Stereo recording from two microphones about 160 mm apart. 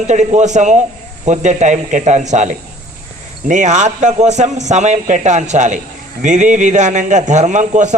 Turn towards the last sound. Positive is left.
turn(degrees=-50)  # may be behind; listen again after turning